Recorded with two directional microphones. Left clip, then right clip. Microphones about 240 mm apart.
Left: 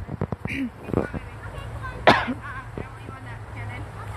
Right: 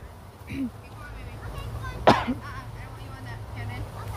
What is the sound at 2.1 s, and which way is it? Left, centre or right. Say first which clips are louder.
Cough: left 2 dB; centre.